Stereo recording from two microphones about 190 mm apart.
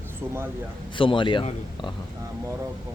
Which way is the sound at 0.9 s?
25° left (ahead or behind).